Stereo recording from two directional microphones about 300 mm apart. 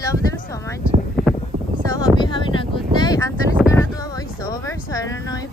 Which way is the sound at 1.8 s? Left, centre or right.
Centre.